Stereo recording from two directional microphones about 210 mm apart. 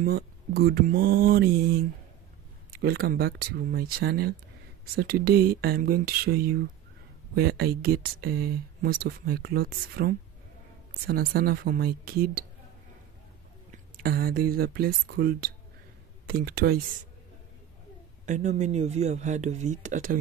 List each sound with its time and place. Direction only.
0.0 s speech: 45° right (ahead or behind)
13.9 s speech: 45° right (ahead or behind)
18.2 s speech: 35° right (ahead or behind)